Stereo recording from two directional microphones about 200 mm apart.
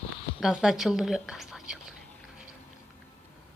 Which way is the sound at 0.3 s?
Centre (ahead or behind).